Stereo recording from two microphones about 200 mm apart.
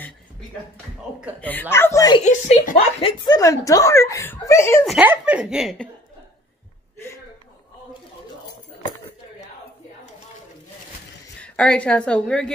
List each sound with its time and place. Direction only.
1.4 s speech: 10° left (ahead or behind)
2.1 s a woman's voice: 35° left (ahead or behind)
3.0 s speech: 25° left (ahead or behind)
4.8 s a woman's voice: 5° right (ahead or behind)
11.4 s a woman's voice: 5° left (ahead or behind)